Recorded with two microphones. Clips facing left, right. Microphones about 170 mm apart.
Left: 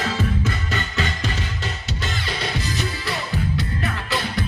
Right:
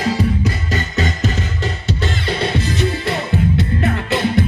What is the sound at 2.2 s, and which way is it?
Music, 25° right (ahead or behind).